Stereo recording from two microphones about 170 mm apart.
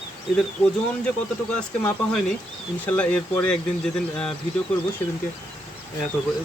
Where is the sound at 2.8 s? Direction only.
10° left (ahead or behind).